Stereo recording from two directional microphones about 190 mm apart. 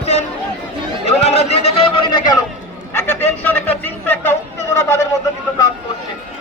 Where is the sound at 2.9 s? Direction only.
10° left (ahead or behind).